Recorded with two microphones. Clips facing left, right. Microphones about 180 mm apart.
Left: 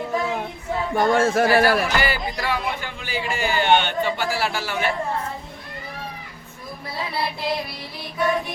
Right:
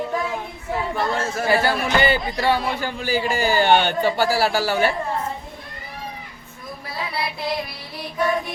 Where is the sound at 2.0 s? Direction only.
25° right (ahead or behind).